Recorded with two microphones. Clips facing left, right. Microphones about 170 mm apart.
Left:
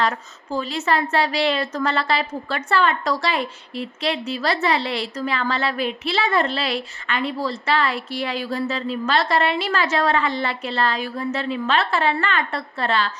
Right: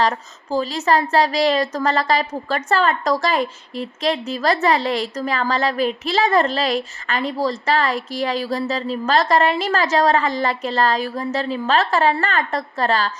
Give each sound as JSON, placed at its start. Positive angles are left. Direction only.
{"t": 0.5, "sound": "a woman's voice", "side_deg": -40}